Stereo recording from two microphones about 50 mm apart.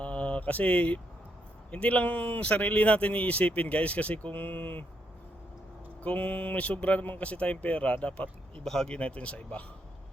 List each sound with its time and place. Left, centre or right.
0.0 s mantra: left
1.7 s speech: left
6.0 s speech: left
8.6 s speech: centre
8.9 s speech: left